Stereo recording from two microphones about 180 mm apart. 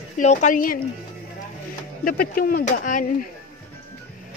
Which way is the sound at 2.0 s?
55° left (ahead or behind).